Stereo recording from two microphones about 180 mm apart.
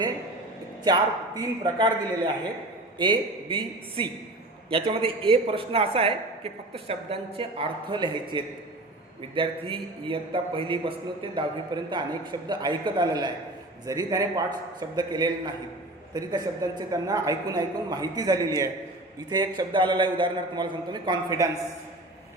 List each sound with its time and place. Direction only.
0.9 s a man's voice: 25° right (ahead or behind)